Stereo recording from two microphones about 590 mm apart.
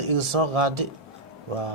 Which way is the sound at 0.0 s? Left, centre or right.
Right.